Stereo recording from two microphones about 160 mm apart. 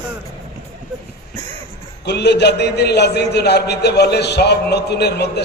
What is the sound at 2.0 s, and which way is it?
A man's voice, 90° left.